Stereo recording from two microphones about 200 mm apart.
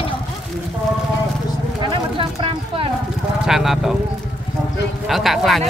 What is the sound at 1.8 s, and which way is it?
Speech, 25° right (ahead or behind).